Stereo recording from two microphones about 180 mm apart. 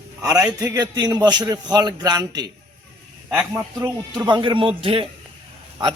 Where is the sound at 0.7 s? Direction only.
20° right (ahead or behind).